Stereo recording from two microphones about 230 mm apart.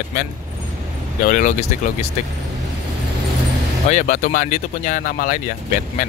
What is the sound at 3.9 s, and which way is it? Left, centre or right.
Speech, left.